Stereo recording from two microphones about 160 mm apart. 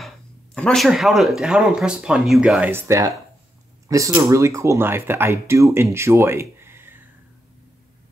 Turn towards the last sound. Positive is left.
turn(degrees=-15)  # may be behind; listen again after turning